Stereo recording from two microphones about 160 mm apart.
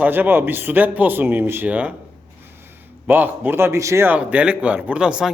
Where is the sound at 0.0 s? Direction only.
10° right (ahead or behind).